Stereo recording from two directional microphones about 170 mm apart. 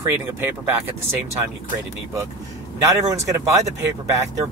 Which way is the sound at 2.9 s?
20° right (ahead or behind).